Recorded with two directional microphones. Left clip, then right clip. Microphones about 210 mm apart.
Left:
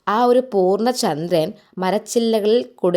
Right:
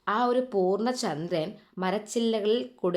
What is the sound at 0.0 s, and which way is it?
A woman's voice, 35° left (ahead or behind).